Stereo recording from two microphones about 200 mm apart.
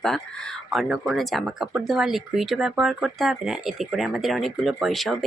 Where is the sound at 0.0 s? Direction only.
5° left (ahead or behind).